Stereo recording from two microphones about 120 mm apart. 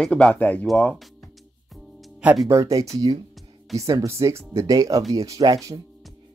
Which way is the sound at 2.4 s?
25° right (ahead or behind).